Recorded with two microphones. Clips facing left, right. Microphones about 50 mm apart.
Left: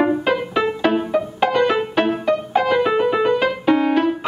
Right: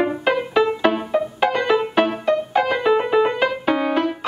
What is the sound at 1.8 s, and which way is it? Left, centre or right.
Music, centre.